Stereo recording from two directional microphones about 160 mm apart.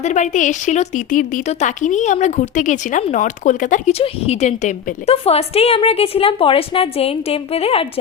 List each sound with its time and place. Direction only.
0.0 s a woman's voice: 50° left (ahead or behind)